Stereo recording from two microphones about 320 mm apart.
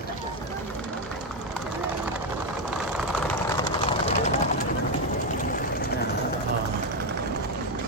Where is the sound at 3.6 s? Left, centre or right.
Centre.